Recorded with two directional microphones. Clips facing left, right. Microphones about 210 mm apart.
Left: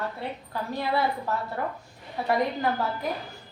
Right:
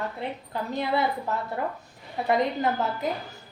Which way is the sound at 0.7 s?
20° right (ahead or behind).